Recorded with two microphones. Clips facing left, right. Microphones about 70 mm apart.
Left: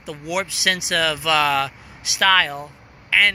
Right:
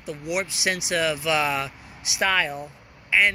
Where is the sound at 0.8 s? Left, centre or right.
Left.